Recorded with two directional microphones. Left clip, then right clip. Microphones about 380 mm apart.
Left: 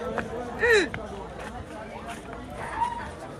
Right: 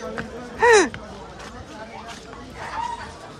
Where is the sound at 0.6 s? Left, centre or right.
Centre.